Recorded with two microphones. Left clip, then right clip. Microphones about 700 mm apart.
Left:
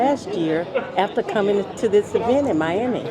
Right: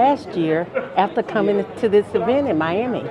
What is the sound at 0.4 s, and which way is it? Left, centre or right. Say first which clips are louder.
Speech: right 2 dB; centre.